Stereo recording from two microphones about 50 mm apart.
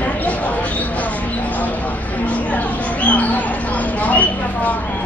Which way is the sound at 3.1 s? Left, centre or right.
Left.